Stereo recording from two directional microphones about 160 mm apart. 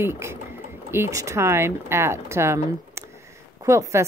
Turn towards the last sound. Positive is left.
turn(degrees=-20)  # may be behind; listen again after turning